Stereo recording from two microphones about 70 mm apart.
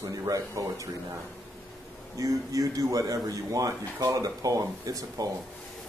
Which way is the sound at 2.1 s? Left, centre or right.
Right.